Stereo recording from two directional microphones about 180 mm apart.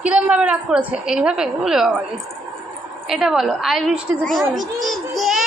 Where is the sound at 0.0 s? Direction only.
5° right (ahead or behind).